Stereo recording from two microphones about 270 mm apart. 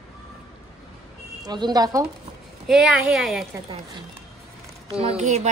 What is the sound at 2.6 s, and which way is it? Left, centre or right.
Speech, centre.